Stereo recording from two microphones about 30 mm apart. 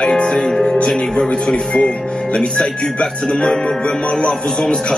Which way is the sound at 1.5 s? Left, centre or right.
Left.